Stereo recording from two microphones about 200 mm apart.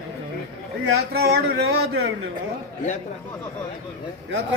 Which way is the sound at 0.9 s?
55° right (ahead or behind).